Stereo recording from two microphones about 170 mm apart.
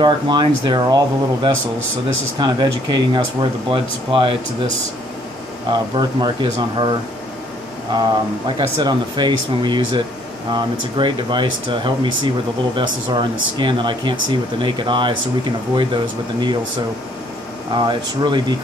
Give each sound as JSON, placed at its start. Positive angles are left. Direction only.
{"t": 0.0, "sound": "speech", "side_deg": -25}
{"t": 5.7, "sound": "speech", "side_deg": -25}
{"t": 7.9, "sound": "speech", "side_deg": -25}
{"t": 17.7, "sound": "speech", "side_deg": -25}